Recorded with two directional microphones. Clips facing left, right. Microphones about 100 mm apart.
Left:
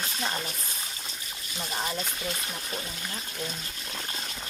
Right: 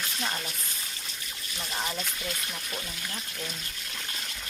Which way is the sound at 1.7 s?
15° left (ahead or behind).